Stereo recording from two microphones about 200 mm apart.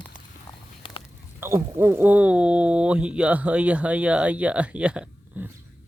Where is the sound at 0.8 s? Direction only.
25° left (ahead or behind).